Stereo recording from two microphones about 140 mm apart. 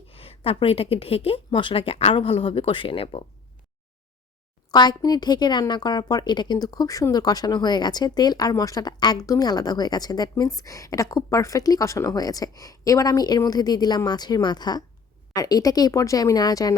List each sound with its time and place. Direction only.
0.1 s a woman's voice: 45° left (ahead or behind)
4.7 s a woman's voice: 30° left (ahead or behind)